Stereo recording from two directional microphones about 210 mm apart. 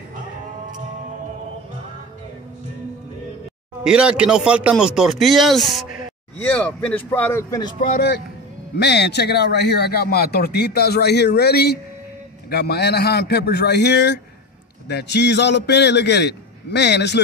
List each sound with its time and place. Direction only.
3.8 s speech: 5° right (ahead or behind); by 7.7 s 15° left (ahead or behind)
7.9 s speech: 50° left (ahead or behind)